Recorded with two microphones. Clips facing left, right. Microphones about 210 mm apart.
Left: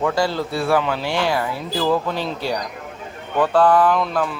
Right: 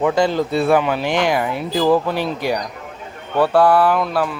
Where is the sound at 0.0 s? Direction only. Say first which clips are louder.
Right 4 dB; 20° right (ahead or behind).